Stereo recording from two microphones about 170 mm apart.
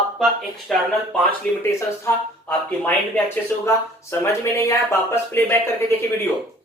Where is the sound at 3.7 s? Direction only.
15° left (ahead or behind).